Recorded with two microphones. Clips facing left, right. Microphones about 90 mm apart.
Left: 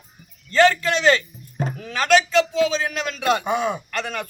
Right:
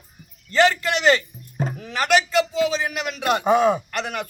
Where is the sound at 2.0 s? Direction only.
10° right (ahead or behind).